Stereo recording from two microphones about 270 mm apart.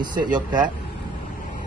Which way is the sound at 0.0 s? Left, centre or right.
Centre.